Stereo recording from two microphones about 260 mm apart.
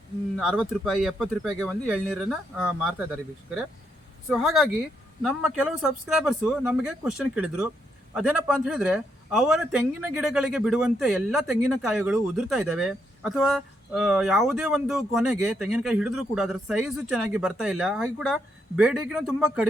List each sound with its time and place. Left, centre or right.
0.3 s a man's voice: centre
4.3 s a man's voice: centre